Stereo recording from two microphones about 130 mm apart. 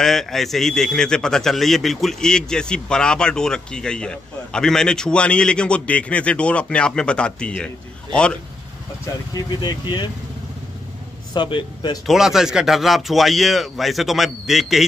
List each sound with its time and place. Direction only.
0.0 s a man's voice: centre (ahead or behind)
9.3 s speech: 35° left (ahead or behind)
11.3 s speech: 35° left (ahead or behind)
12.1 s speech: 5° right (ahead or behind)